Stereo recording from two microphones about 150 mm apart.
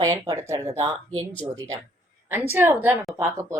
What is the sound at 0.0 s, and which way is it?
Speech, 20° right (ahead or behind).